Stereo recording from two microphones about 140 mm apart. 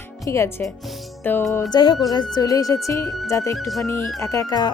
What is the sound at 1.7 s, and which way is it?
Speech, 30° left (ahead or behind).